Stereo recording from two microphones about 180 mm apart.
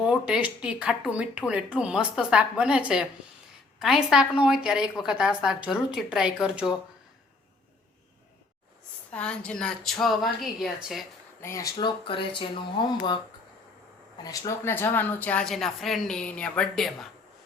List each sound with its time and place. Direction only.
0.0 s speech: 5° right (ahead or behind)
9.1 s speech: 5° left (ahead or behind)
11.3 s speech: 15° left (ahead or behind)
14.2 s speech: 20° left (ahead or behind); by 17.1 s centre (ahead or behind)